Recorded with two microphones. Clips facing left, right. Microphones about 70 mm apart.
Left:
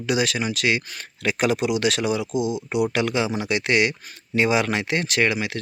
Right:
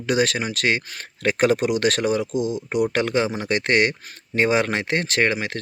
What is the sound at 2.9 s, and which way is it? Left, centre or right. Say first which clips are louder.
Speech: right 1 dB; right.